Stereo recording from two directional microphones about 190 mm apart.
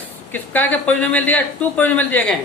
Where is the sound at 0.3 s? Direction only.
10° left (ahead or behind).